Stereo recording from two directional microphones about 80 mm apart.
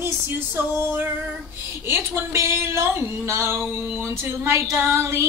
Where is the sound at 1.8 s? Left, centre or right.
Right.